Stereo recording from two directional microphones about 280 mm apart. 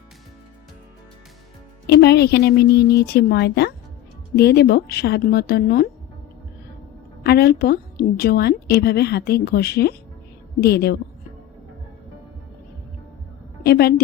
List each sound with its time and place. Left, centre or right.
1.9 s a woman's voice: left
7.3 s a woman's voice: left
13.7 s a woman's voice: left